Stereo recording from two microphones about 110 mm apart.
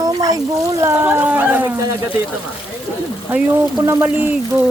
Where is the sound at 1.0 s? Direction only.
15° right (ahead or behind).